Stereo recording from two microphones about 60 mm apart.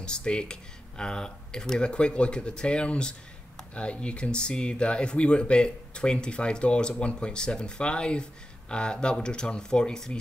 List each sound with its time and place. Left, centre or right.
0.0 s speech: centre